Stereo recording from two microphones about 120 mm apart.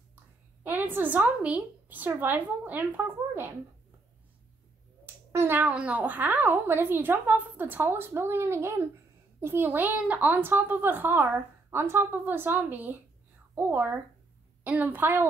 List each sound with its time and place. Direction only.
0.7 s a woman's voice: 15° right (ahead or behind)
5.0 s a woman's voice: 20° right (ahead or behind)